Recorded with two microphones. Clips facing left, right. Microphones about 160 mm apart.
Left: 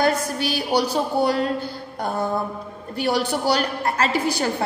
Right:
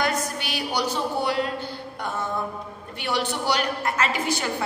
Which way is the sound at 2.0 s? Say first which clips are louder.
Left 6 dB; 35° left (ahead or behind).